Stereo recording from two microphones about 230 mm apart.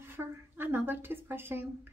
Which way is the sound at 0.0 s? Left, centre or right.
Centre.